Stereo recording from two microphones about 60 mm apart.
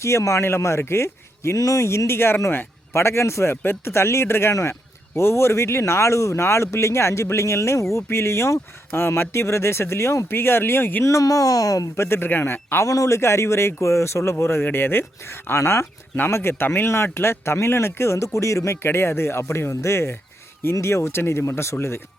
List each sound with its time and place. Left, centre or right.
0.0 s speech: left
3.5 s speech: left
8.9 s speech: left
10.2 s a man's voice: left
11.0 s speech: left
11.9 s a man's voice: left
12.8 s speech: left
13.1 s speech: left